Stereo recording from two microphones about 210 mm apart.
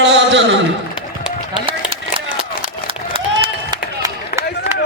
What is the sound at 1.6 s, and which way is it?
Run, 25° right (ahead or behind).